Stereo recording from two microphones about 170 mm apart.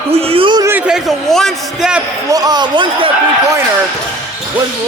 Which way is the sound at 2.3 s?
20° right (ahead or behind).